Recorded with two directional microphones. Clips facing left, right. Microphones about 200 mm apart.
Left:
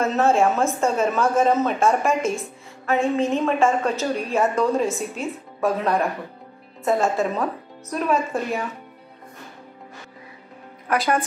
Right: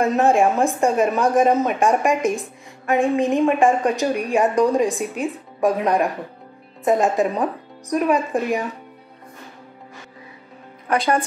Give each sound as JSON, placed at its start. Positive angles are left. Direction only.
{"t": 0.0, "sound": "a woman's voice", "side_deg": -15}